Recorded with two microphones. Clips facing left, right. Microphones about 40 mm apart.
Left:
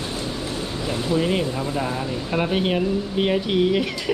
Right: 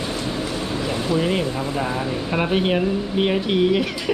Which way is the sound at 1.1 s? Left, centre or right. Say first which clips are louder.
Even; centre.